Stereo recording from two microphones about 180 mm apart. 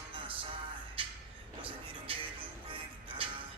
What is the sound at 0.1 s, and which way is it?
Music, 30° right (ahead or behind).